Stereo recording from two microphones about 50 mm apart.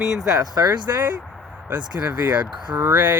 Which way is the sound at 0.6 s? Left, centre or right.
Right.